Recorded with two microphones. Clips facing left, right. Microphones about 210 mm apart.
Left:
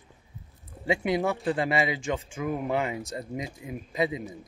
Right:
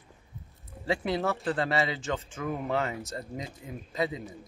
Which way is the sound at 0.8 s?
15° left (ahead or behind).